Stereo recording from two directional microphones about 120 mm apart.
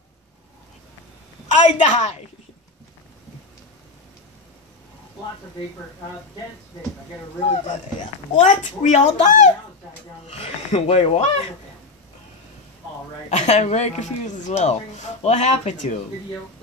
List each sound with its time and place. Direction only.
1.5 s a woman's voice: 75° left (ahead or behind)
7.4 s speech: 85° left
10.2 s speech: 55° left (ahead or behind)
13.3 s speech: 75° left (ahead or behind)